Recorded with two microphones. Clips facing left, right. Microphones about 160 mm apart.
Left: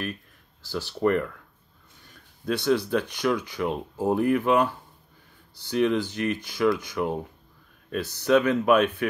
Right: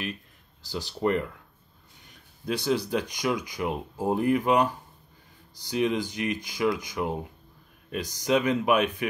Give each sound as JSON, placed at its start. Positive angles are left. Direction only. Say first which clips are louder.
{"t": 0.6, "sound": "speech", "louder": "left 3 dB", "side_deg": -15}
{"t": 2.5, "sound": "speech", "louder": "left 3 dB", "side_deg": 60}
{"t": 2.8, "sound": "speech", "louder": "left 3 dB", "side_deg": -10}